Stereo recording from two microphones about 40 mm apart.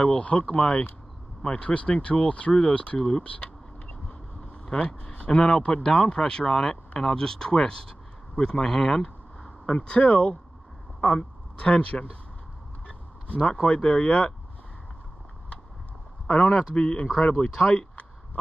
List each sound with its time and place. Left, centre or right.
0.2 s speech: left
3.0 s speech: centre
3.3 s speech: left
8.4 s a sound: centre
9.8 s speech: left
12.8 s vehicle: left
13.5 s speech: left
16.3 s speech: left